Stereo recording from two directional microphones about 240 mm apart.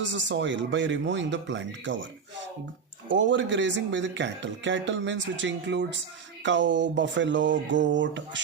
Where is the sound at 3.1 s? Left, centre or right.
Right.